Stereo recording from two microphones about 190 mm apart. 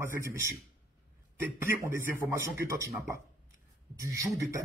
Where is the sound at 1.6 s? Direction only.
15° right (ahead or behind).